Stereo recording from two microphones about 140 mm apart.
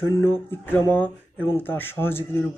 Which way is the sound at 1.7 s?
15° left (ahead or behind).